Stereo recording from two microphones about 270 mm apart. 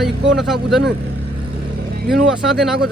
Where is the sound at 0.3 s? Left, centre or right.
Centre.